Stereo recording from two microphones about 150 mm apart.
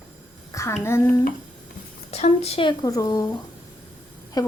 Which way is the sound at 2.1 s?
45° left (ahead or behind).